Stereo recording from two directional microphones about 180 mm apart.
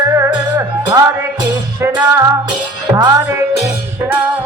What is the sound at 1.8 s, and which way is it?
Speech, 15° right (ahead or behind).